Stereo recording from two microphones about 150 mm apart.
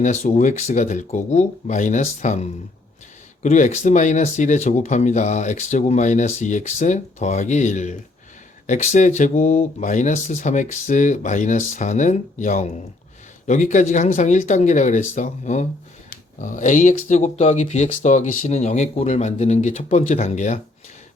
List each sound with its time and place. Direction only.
0.0 s speech: 55° left (ahead or behind)